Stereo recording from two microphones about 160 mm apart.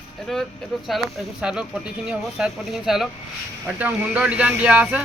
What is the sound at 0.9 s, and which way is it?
Speech, centre (ahead or behind).